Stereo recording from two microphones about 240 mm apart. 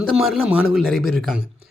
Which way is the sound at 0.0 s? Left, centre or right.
Centre.